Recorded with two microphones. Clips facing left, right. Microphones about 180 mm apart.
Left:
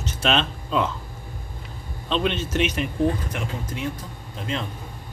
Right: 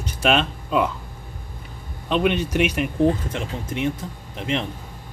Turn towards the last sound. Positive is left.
turn(degrees=-25)  # may be behind; listen again after turning